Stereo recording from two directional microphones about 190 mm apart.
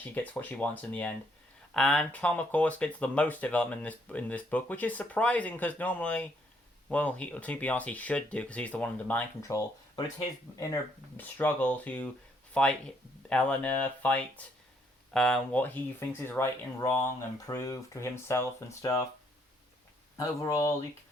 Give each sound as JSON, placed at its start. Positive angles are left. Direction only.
{"t": 0.0, "sound": "speech", "side_deg": 10}
{"t": 11.2, "sound": "speech", "side_deg": 10}
{"t": 20.1, "sound": "speech", "side_deg": 15}